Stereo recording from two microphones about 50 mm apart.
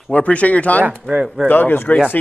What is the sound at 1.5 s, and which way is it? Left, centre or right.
Speech, left.